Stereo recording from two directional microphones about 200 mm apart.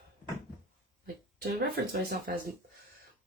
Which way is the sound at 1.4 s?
50° right (ahead or behind).